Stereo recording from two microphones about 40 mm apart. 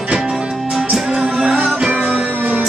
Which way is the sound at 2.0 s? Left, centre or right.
Right.